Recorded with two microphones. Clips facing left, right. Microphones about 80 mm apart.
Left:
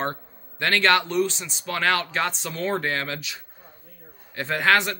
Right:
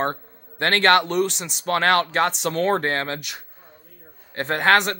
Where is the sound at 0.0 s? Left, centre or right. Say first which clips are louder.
Right 4 dB; right.